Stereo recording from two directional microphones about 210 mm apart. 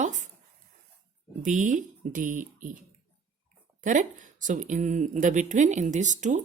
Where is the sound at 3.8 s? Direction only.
35° right (ahead or behind).